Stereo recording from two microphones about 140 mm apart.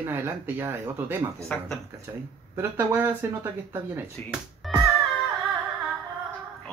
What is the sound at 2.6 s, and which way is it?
Speech, 15° right (ahead or behind).